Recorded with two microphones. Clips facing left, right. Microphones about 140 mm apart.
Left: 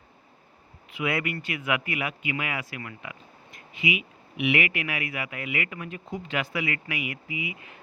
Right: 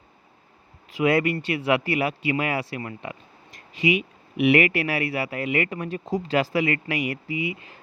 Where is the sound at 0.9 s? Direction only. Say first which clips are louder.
Right 8 dB; 35° right (ahead or behind).